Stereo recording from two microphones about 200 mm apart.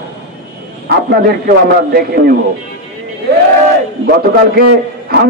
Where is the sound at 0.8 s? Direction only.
55° right (ahead or behind).